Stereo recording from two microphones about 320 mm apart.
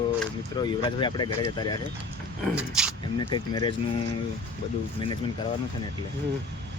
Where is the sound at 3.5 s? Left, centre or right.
Centre.